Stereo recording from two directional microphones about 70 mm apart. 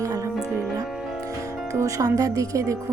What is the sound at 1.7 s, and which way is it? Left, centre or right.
Speech, right.